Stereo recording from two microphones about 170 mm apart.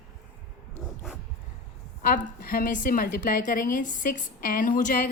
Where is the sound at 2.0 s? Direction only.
55° left (ahead or behind).